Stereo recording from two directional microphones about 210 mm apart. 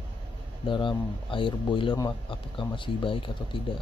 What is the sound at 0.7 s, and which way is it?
Speech, 25° left (ahead or behind).